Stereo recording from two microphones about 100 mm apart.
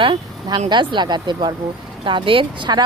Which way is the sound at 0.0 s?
50° right (ahead or behind).